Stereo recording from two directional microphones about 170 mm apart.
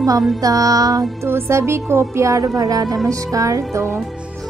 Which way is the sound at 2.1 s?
20° right (ahead or behind).